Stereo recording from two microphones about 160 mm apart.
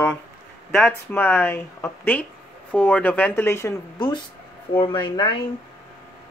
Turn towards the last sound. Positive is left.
turn(degrees=30)  # may be behind; listen again after turning